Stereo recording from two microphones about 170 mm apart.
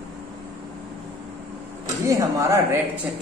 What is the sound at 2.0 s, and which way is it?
Speech, 20° right (ahead or behind).